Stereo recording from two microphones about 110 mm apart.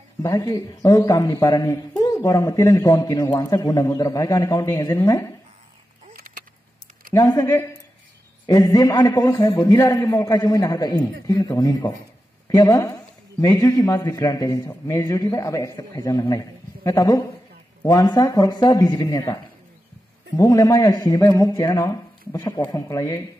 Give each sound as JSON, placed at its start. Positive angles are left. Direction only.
{"t": 0.2, "sound": "a man's voice", "side_deg": 30}
{"t": 7.2, "sound": "a man's voice", "side_deg": 30}